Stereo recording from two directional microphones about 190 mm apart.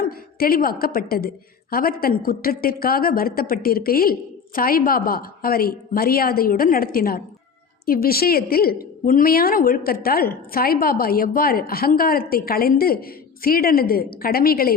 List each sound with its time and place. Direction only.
0.0 s a woman's voice: 50° left (ahead or behind)